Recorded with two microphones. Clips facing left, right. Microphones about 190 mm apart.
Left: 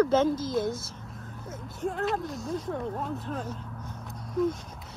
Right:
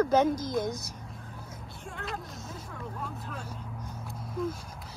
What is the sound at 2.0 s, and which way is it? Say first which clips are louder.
Speech: left 5 dB; centre (ahead or behind).